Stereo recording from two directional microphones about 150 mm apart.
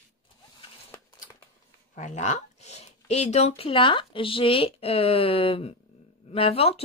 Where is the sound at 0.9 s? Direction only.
15° left (ahead or behind).